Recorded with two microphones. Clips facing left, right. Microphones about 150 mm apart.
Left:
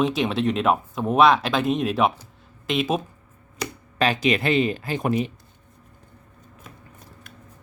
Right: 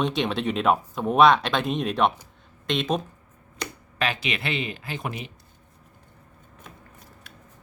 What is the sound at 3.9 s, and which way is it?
Speech, 40° left (ahead or behind).